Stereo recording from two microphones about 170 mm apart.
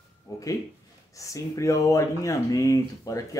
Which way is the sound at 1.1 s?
20° left (ahead or behind).